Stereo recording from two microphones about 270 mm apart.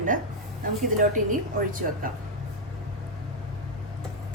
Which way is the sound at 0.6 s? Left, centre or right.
Right.